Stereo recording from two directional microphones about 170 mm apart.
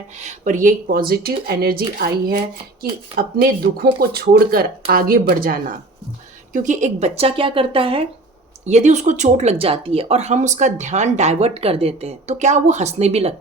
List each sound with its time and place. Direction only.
0.2 s speech: 45° right (ahead or behind)
6.5 s speech: 50° right (ahead or behind); by 8.0 s 30° right (ahead or behind)
8.6 s speech: 40° right (ahead or behind)